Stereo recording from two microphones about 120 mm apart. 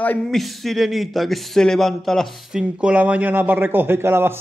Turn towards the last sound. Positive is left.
turn(degrees=-20)  # may be behind; listen again after turning